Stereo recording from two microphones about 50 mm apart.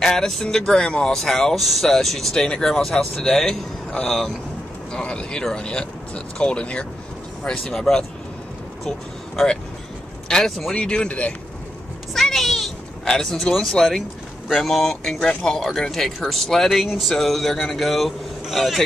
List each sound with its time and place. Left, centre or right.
0.0 s speech: centre
4.9 s speech: centre
7.4 s speech: centre
10.2 s a sound: centre
10.7 s speech: centre
12.1 s a sound: centre
13.0 s speech: centre